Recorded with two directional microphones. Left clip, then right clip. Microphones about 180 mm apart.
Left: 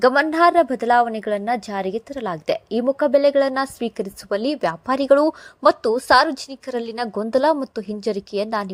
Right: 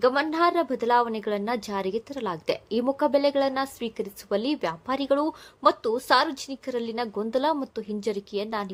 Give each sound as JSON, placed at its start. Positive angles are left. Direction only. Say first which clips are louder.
{"t": 0.0, "sound": "a woman's voice", "louder": "left 7 dB", "side_deg": 35}